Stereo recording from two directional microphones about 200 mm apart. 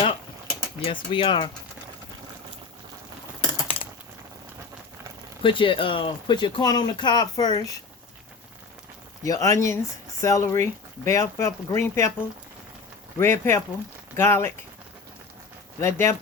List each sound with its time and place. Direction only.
0.0 s a sound: 25° left (ahead or behind)
5.4 s speech: 25° left (ahead or behind)
9.2 s speech: 15° left (ahead or behind)
13.1 s speech: 10° left (ahead or behind)
15.8 s speech: 15° left (ahead or behind)